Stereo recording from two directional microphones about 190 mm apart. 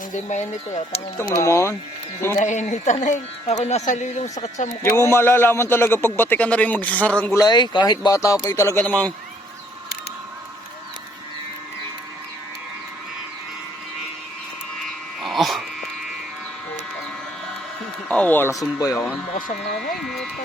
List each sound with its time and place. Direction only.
0.1 s speech: 40° left (ahead or behind)
1.3 s a man's voice: 15° left (ahead or behind)
2.4 s speech: 40° left (ahead or behind)
4.8 s a man's voice: 15° left (ahead or behind)
7.3 s a man's voice: 20° left (ahead or behind)
14.8 s a sound: centre (ahead or behind)
18.1 s a sound: 10° left (ahead or behind)
18.8 s a man's voice: 15° left (ahead or behind)
20.0 s speech: centre (ahead or behind)